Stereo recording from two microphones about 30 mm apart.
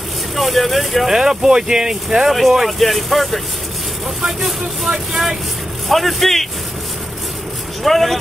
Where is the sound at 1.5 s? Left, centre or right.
Right.